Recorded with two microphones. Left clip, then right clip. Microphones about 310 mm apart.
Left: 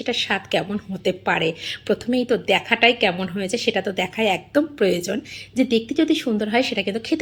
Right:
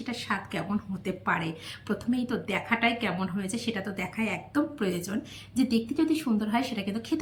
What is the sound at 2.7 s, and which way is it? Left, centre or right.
A woman's voice, left.